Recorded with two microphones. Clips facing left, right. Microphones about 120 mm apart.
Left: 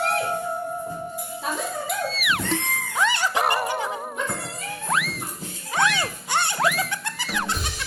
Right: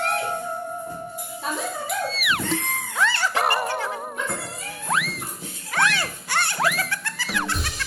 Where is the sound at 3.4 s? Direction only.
Centre (ahead or behind).